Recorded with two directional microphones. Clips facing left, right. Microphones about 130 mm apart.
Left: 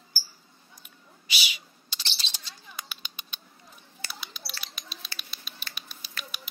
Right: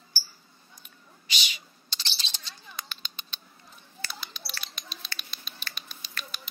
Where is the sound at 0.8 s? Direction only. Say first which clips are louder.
Even; 5° left (ahead or behind).